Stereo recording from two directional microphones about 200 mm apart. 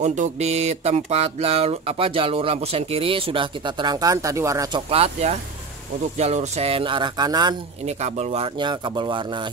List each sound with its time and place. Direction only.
0.0 s mantra: 35° right (ahead or behind); by 4.8 s 15° right (ahead or behind)
4.8 s mantra: 30° right (ahead or behind)
7.8 s mantra: 35° right (ahead or behind)